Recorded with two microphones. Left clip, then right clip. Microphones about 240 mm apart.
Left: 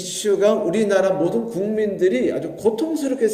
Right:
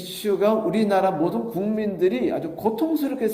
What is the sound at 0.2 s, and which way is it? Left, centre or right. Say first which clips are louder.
A man's voice: left 3 dB; right.